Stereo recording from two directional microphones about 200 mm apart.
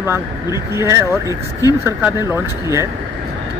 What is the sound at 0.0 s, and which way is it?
Speech, 15° right (ahead or behind).